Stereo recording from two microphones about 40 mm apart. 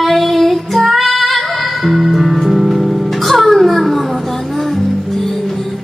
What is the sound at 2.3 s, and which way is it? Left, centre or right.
Music, centre.